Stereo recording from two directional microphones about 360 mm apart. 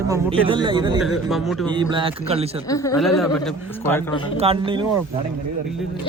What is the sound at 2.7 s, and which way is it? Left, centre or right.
A man's voice, centre.